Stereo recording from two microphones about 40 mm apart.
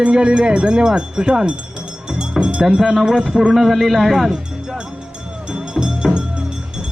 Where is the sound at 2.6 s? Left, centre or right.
Centre.